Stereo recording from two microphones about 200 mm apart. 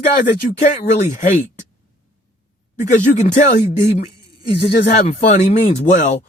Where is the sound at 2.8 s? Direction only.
35° left (ahead or behind).